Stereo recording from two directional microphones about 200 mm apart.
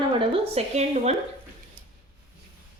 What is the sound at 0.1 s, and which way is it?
A woman's voice, 25° right (ahead or behind).